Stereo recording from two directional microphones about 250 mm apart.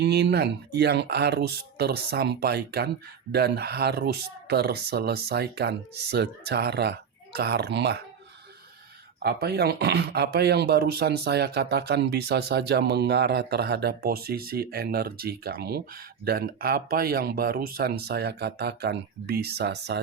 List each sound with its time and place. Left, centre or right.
0.0 s speech: right
9.2 s speech: right